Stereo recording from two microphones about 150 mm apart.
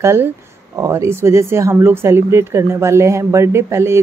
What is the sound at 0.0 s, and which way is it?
Speech, 15° right (ahead or behind).